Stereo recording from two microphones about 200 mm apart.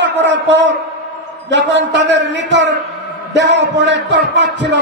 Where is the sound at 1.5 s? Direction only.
60° right (ahead or behind).